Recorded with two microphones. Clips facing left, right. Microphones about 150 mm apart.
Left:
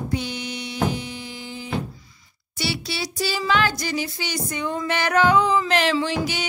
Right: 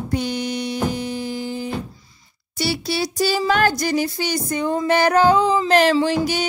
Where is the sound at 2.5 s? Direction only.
40° right (ahead or behind).